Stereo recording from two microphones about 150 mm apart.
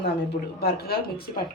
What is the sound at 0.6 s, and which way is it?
Speech, 90° left.